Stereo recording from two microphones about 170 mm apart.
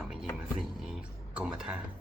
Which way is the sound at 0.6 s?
5° right (ahead or behind).